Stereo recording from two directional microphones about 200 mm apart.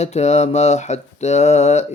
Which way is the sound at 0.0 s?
35° left (ahead or behind).